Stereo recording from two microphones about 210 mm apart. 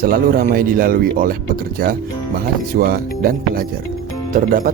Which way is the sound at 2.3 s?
45° right (ahead or behind).